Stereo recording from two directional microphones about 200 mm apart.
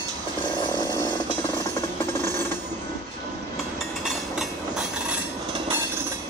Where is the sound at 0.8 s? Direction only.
20° left (ahead or behind).